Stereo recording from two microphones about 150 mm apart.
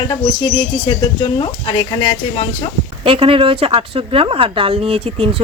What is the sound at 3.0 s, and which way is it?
A woman's voice, 40° right (ahead or behind).